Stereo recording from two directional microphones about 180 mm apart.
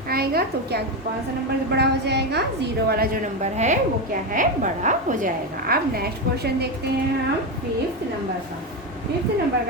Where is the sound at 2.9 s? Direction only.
55° right (ahead or behind).